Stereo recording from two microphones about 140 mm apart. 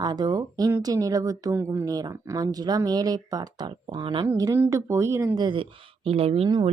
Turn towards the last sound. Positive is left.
turn(degrees=-45)  # may be behind; listen again after turning